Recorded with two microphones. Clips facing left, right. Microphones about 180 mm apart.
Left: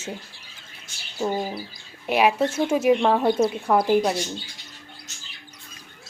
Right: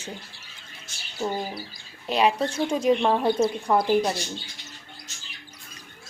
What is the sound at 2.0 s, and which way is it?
Speech, 10° left (ahead or behind).